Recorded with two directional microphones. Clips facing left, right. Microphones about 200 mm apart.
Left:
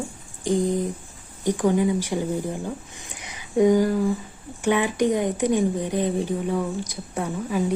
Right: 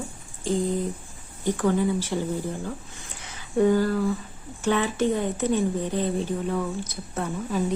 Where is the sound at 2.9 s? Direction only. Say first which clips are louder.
Left 2 dB; 15° left (ahead or behind).